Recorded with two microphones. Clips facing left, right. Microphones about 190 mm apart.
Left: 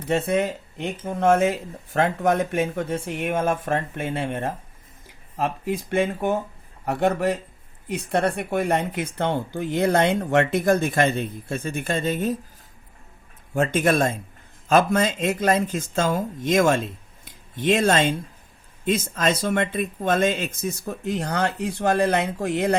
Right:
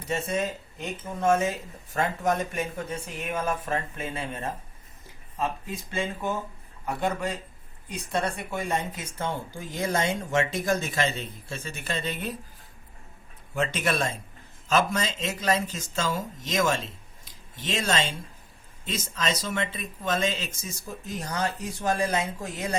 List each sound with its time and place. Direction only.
0.1 s speech: 60° left (ahead or behind)
5.4 s speech: 65° left (ahead or behind); by 12.4 s 45° left (ahead or behind)
13.5 s speech: 50° left (ahead or behind)